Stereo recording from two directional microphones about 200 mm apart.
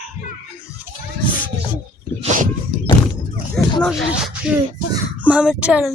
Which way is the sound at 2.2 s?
40° right (ahead or behind).